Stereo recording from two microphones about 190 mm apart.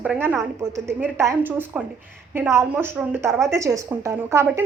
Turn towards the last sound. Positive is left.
turn(degrees=-15)  # may be behind; listen again after turning